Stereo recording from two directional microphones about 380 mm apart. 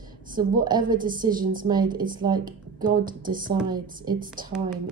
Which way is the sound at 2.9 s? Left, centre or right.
Right.